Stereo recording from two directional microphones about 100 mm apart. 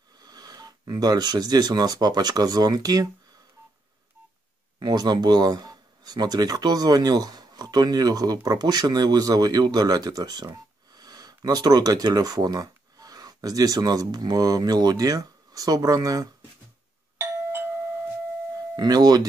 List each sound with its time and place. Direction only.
0.2 s speech: 40° right (ahead or behind)
4.7 s speech: 45° right (ahead or behind)
17.2 s doorbell: 25° right (ahead or behind)
18.8 s speech: 40° right (ahead or behind)